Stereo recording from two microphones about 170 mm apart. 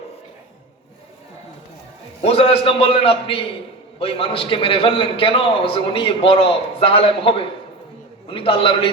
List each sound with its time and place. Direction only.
2.2 s a man's voice: 35° left (ahead or behind)